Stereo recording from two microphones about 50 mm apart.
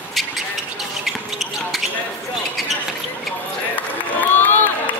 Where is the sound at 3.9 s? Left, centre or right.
Left.